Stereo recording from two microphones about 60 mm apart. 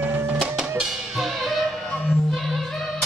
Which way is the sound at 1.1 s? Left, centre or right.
Centre.